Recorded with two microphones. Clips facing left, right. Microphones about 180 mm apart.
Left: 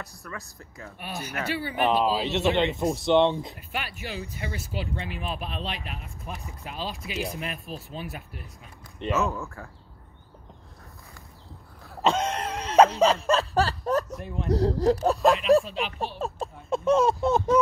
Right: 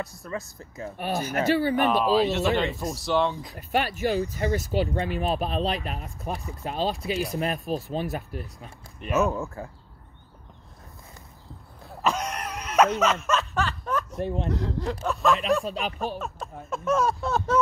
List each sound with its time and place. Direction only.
0.2 s speech: 20° right (ahead or behind)
0.9 s speech: 40° right (ahead or behind)
1.8 s speech: 15° left (ahead or behind)
3.5 s speech: 40° right (ahead or behind)
9.1 s speech: 20° right (ahead or behind)
12.0 s a sound: 25° left (ahead or behind)
14.1 s speech: 30° right (ahead or behind)
14.5 s speech: 35° left (ahead or behind)
15.6 s speech: 40° right (ahead or behind)
16.2 s speech: 30° left (ahead or behind)